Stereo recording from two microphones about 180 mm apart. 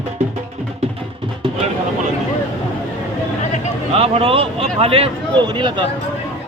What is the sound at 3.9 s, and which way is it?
A man's voice, 35° right (ahead or behind).